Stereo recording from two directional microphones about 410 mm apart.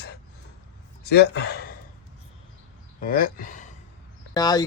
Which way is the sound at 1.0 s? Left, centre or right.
Left.